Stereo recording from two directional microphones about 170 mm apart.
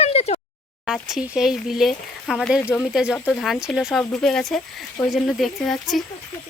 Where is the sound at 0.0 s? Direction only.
35° left (ahead or behind).